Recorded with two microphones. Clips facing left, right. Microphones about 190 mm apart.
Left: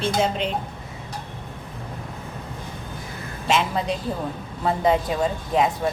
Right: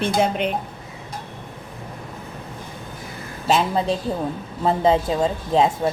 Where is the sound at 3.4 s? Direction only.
35° right (ahead or behind).